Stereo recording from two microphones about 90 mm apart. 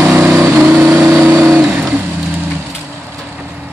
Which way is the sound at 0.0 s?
20° right (ahead or behind).